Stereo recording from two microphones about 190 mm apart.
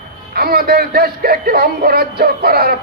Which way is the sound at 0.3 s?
55° right (ahead or behind).